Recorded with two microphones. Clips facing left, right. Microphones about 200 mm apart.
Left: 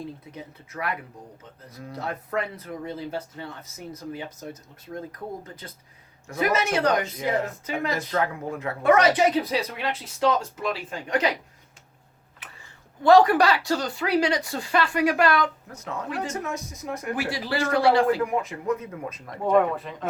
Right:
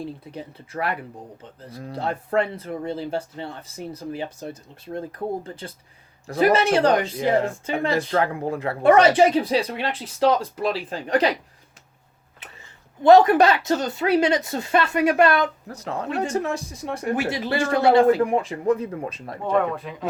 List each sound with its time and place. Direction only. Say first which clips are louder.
0.0 s speech: right 4 dB; 30° right (ahead or behind)
13.0 s speech: right 3 dB; 20° right (ahead or behind)
19.5 s speech: left 1 dB; 5° left (ahead or behind)